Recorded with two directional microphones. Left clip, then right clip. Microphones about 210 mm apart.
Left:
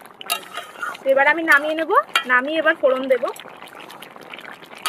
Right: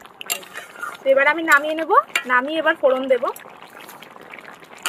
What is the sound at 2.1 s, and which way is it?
Speech, 5° right (ahead or behind).